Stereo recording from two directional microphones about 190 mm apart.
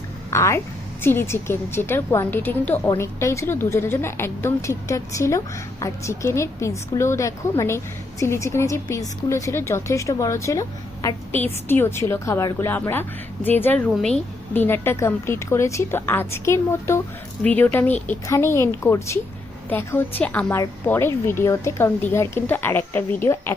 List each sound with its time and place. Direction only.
0.3 s a woman's voice: 15° left (ahead or behind)